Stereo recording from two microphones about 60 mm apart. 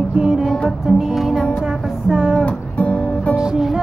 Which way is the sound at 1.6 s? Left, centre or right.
Centre.